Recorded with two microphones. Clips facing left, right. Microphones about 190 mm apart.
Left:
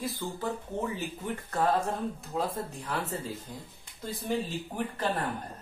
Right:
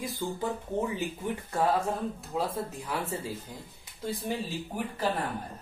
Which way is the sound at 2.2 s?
Centre (ahead or behind).